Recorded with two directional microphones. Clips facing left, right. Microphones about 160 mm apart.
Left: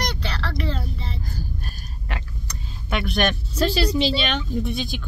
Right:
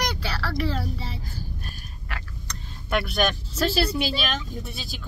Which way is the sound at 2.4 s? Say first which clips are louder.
Even; centre (ahead or behind).